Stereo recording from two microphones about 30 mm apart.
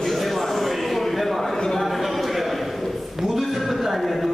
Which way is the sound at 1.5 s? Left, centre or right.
Centre.